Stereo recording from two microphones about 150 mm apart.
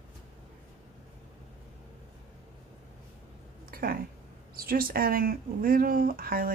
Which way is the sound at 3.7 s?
75° right (ahead or behind).